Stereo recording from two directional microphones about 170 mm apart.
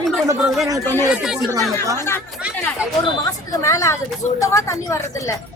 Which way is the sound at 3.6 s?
20° left (ahead or behind).